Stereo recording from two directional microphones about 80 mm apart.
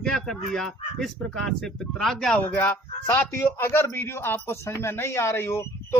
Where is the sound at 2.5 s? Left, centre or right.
Left.